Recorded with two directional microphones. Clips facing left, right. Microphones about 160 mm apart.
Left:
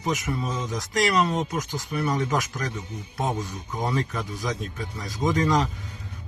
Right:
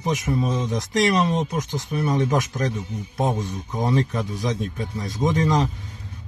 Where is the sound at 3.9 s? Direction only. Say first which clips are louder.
Right 5 dB; 25° right (ahead or behind).